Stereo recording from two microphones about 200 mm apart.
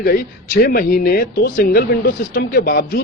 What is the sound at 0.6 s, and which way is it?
Speech, 50° left (ahead or behind).